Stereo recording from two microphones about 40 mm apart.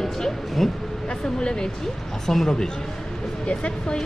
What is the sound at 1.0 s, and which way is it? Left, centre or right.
Speech, left.